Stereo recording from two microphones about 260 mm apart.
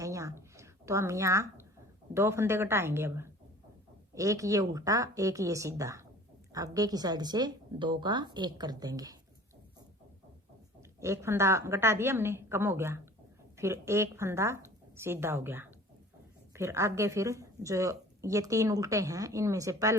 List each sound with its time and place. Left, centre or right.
0.0 s a sound: centre
2.1 s speech: centre
11.0 s speech: centre